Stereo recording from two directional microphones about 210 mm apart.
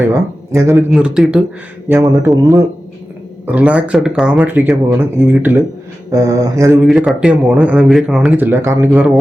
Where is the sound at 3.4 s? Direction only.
5° right (ahead or behind).